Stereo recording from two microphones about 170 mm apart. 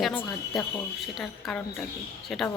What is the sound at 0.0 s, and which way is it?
A woman's voice, 5° left (ahead or behind).